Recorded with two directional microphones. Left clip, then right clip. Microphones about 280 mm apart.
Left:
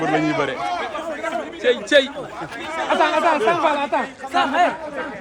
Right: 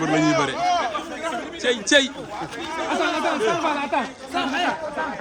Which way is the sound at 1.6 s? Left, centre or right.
Centre.